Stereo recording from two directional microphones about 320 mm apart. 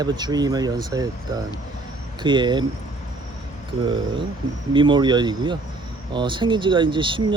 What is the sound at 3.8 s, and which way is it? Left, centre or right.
Speech, centre.